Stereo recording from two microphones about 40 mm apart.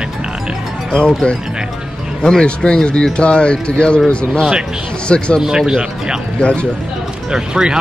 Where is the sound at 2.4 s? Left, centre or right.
Left.